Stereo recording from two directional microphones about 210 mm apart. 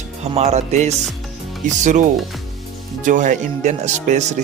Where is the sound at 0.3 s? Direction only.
30° right (ahead or behind).